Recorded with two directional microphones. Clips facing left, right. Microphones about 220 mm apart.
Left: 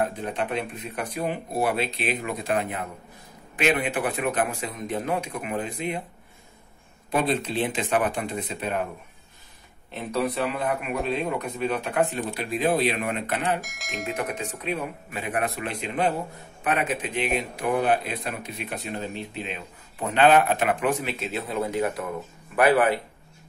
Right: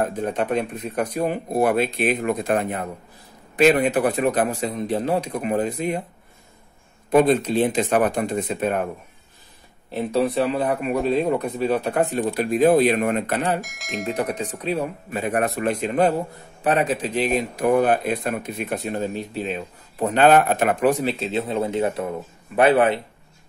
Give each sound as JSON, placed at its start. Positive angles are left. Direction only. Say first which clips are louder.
{"t": 0.0, "sound": "a man's voice", "louder": "right 4 dB", "side_deg": -45}
{"t": 7.1, "sound": "speech", "louder": "right 8 dB", "side_deg": -45}
{"t": 9.8, "sound": "a man's voice", "louder": "right 5 dB", "side_deg": -30}
{"t": 13.6, "sound": "speech", "louder": "right 5 dB", "side_deg": 0}
{"t": 14.1, "sound": "a man's voice", "louder": "right 5 dB", "side_deg": -35}